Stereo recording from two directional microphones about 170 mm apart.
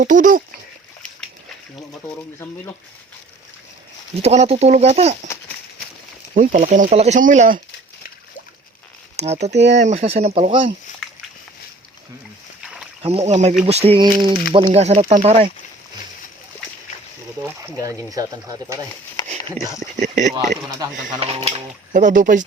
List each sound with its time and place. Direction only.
0.0 s speech: 50° right (ahead or behind)
4.2 s speech: 40° right (ahead or behind)
6.3 s speech: 50° right (ahead or behind)
9.2 s speech: 40° right (ahead or behind)
9.5 s speech: 90° right
9.7 s speech: 40° right (ahead or behind)
12.6 s rowboat: 5° right (ahead or behind)
13.0 s speech: 35° right (ahead or behind)
14.7 s speech: 40° right (ahead or behind)
17.4 s speech: 15° right (ahead or behind)
20.0 s speech: 45° right (ahead or behind)
20.7 s speech: 20° right (ahead or behind)
21.9 s speech: 50° right (ahead or behind)